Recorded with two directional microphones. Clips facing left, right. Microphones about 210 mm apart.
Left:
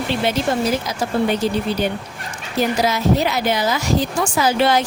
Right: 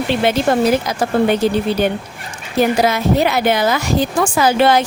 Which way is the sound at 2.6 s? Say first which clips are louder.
Right 4 dB; 55° right (ahead or behind).